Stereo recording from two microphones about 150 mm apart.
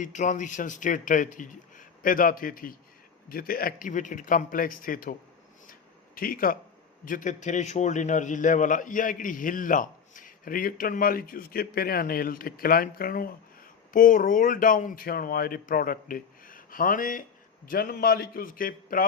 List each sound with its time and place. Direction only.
0.0 s a man's voice: 55° left (ahead or behind)
6.1 s a man's voice: 70° left (ahead or behind)
17.7 s speech: 75° left (ahead or behind)